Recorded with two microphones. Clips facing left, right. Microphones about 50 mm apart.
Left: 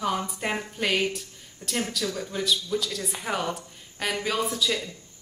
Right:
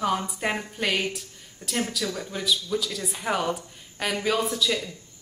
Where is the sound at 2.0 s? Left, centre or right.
Centre.